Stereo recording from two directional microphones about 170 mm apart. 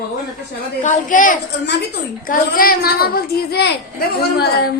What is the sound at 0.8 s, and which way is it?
Speech, 50° left (ahead or behind).